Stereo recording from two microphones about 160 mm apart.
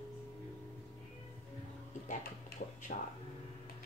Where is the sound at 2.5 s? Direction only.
70° left (ahead or behind).